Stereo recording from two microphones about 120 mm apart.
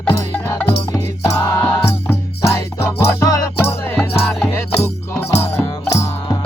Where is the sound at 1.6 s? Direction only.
10° left (ahead or behind).